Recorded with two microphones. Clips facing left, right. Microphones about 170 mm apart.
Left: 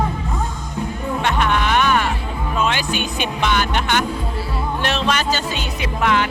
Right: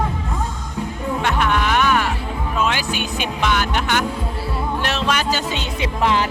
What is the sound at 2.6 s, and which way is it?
Speech, 5° right (ahead or behind).